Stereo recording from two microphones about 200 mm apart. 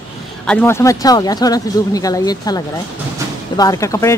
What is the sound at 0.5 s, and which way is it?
Speech, 10° left (ahead or behind).